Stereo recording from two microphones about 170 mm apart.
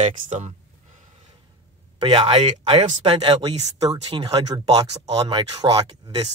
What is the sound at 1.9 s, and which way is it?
Speech, 30° right (ahead or behind).